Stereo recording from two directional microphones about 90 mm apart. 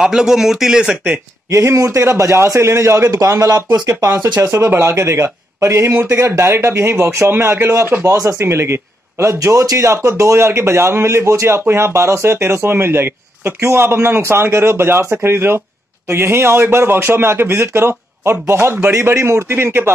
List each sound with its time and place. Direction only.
0.0 s speech: 5° right (ahead or behind)
1.5 s a man's voice: 35° right (ahead or behind)